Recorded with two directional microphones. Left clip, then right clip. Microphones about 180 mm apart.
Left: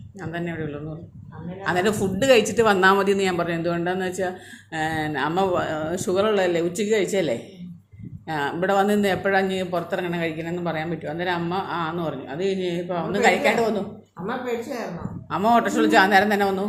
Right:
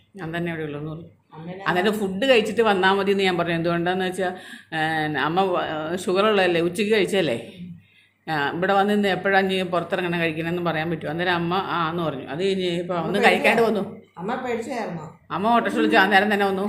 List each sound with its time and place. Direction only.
0.2 s speech: 10° right (ahead or behind)
14.3 s a woman's voice: 45° right (ahead or behind)
15.3 s speech: 5° left (ahead or behind)